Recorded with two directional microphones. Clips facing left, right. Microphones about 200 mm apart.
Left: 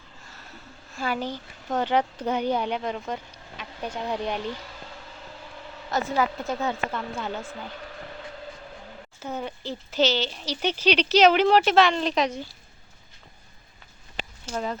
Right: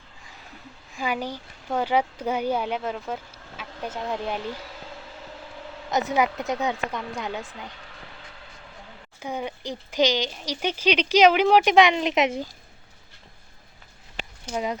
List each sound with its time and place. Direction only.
0.9 s speech: 15° right (ahead or behind)
5.9 s a woman's voice: 20° right (ahead or behind)
9.2 s speech: 10° right (ahead or behind)
14.4 s speech: 15° right (ahead or behind)